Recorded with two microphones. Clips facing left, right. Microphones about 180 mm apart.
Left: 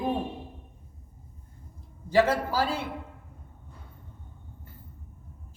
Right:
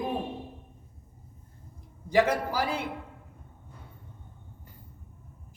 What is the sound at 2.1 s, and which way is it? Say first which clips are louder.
Speech: left 1 dB; 15° right (ahead or behind).